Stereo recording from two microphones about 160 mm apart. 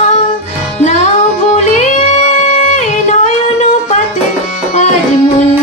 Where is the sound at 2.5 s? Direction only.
45° left (ahead or behind).